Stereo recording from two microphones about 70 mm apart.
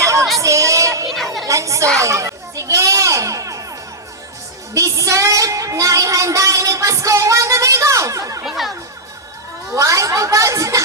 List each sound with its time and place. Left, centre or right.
0.0 s music: right
1.1 s chatter: centre
1.5 s a sound: right
2.0 s children playing: right
4.7 s child singing: right
8.4 s speech: centre
9.7 s child singing: right